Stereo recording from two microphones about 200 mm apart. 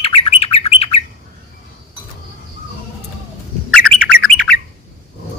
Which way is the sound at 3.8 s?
90° right.